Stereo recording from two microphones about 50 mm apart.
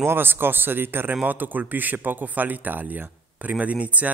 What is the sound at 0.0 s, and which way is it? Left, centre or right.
Speech, right.